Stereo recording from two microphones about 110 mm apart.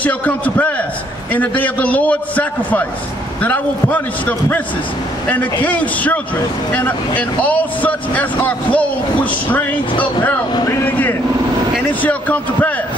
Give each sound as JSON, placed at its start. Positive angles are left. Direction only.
{"t": 0.0, "sound": "speech", "side_deg": 15}
{"t": 10.7, "sound": "speech", "side_deg": 20}